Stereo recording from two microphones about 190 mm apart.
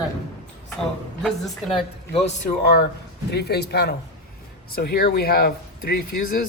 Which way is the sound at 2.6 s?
55° left (ahead or behind).